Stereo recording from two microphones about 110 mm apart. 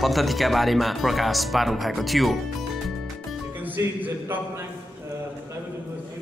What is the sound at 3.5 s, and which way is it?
Speech, 15° right (ahead or behind).